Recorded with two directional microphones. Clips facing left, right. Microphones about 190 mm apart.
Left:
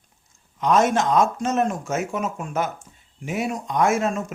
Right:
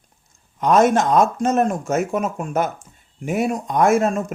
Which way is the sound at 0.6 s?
55° right (ahead or behind).